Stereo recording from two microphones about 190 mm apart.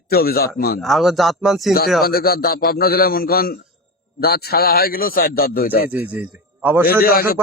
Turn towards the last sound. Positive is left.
turn(degrees=50)  # may be behind; listen again after turning